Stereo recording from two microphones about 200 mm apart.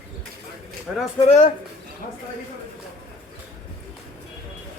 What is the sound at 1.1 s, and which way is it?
Speech, 35° left (ahead or behind).